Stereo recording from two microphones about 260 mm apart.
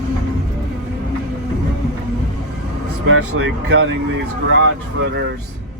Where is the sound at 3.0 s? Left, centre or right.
Right.